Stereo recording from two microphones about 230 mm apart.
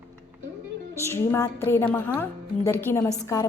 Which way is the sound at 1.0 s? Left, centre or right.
Centre.